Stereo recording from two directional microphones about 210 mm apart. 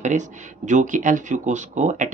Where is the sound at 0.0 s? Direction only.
35° right (ahead or behind).